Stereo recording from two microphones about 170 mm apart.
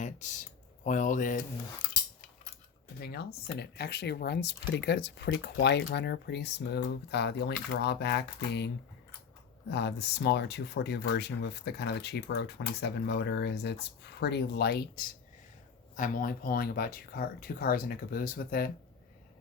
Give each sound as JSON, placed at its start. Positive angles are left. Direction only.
{"t": 0.0, "sound": "computer keyboard", "side_deg": 45}
{"t": 0.9, "sound": "speech", "side_deg": 50}
{"t": 3.0, "sound": "speech", "side_deg": 70}
{"t": 16.0, "sound": "speech", "side_deg": 55}